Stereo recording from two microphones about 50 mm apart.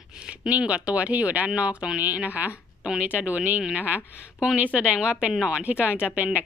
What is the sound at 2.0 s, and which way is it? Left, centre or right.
A woman's voice, right.